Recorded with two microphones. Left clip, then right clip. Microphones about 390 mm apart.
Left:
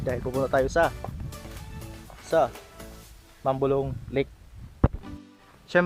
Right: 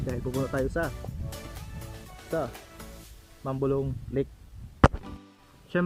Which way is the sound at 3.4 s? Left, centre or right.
Left.